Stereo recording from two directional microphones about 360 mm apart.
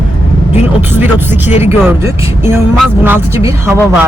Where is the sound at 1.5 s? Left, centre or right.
Centre.